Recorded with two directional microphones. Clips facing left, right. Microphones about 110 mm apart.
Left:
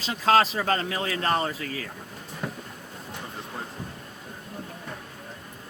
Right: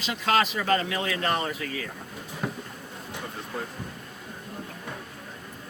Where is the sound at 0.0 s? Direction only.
35° left (ahead or behind).